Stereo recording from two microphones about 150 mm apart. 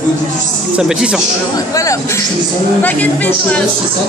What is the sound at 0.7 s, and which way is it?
Speech, 5° right (ahead or behind).